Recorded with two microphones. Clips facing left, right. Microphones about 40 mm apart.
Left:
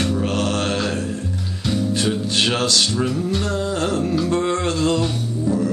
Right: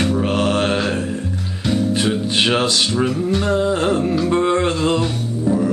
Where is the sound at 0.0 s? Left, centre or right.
Centre.